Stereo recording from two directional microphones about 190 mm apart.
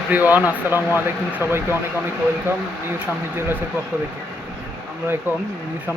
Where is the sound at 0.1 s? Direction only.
10° right (ahead or behind).